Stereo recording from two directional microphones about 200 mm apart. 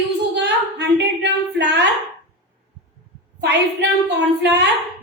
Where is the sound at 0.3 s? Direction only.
60° right (ahead or behind).